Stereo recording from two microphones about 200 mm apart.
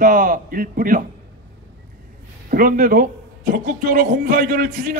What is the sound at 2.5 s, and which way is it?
A man's voice, 45° right (ahead or behind).